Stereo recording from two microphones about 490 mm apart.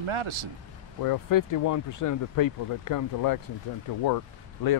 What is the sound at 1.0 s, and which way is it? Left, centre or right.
Speech, left.